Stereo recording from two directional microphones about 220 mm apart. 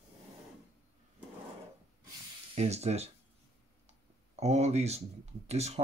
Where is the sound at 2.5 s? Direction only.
30° right (ahead or behind).